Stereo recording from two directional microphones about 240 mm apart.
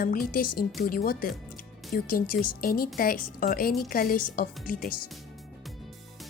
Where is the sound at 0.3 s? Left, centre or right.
Left.